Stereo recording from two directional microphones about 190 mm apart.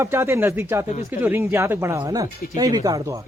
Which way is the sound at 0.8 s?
40° left (ahead or behind).